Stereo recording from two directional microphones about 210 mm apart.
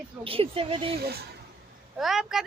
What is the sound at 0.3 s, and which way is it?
Speech, 25° right (ahead or behind).